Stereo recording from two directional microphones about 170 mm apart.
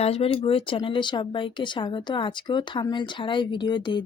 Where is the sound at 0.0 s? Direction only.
35° left (ahead or behind).